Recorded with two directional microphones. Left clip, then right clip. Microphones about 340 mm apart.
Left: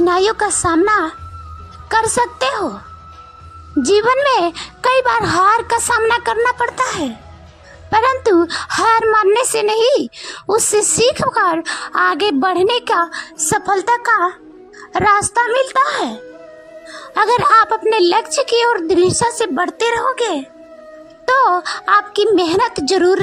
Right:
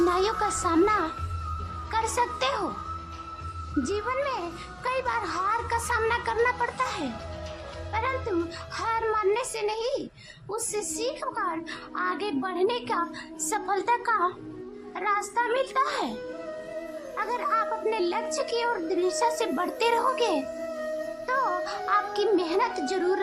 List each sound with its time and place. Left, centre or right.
0.0 s a woman's voice: centre
3.8 s a woman's voice: left
17.2 s a woman's voice: left